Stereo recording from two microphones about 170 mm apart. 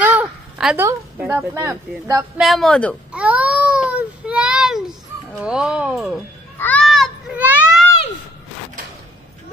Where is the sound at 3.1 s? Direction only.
5° right (ahead or behind).